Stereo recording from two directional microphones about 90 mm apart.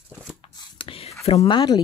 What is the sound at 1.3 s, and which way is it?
Speech, 60° left (ahead or behind).